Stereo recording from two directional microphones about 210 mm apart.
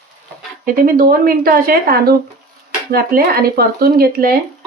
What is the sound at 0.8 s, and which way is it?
Speech, 45° right (ahead or behind).